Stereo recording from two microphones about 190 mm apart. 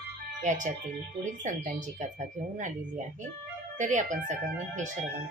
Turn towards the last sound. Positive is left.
turn(degrees=-40)  # may be behind; listen again after turning